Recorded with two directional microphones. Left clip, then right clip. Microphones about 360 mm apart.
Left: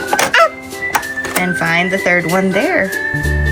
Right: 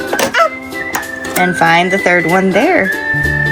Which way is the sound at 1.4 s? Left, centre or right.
Centre.